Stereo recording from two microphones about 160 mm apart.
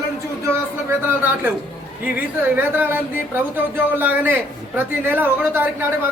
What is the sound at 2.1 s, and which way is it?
Speech, 10° right (ahead or behind).